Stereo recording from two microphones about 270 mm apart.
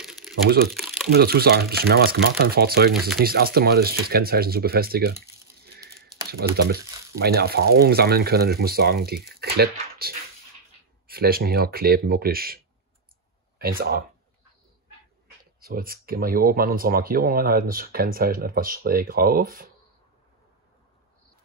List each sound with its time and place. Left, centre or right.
0.3 s crumpling: centre
1.1 s speech: right
6.7 s speech: right
13.6 s speech: right
15.6 s speech: right